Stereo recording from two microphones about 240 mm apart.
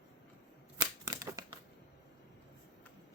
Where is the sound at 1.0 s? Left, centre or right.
Centre.